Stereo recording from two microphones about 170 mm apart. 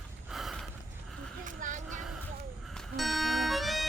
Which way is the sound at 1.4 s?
50° right (ahead or behind).